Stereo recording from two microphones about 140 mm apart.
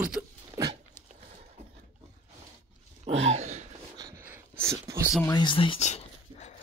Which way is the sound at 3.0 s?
55° right (ahead or behind).